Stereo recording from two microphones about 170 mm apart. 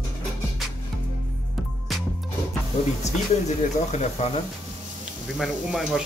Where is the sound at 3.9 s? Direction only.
40° left (ahead or behind).